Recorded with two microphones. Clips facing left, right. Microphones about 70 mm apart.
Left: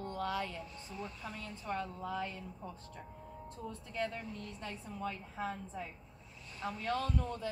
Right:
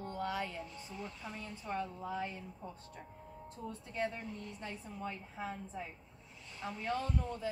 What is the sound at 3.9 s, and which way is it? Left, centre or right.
Speech, right.